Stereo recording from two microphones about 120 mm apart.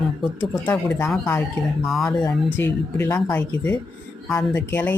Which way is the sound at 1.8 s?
Centre (ahead or behind).